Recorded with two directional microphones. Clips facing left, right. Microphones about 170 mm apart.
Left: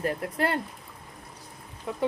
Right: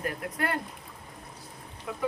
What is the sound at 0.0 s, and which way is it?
Speech, 30° left (ahead or behind).